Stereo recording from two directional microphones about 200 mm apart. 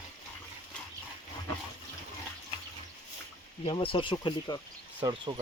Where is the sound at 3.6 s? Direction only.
25° left (ahead or behind).